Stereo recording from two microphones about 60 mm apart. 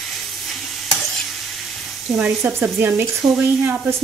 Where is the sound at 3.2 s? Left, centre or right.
Right.